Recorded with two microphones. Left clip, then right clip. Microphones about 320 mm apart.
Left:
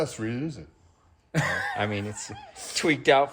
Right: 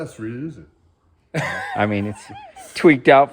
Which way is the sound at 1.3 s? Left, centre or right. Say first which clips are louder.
Right 3 dB; right.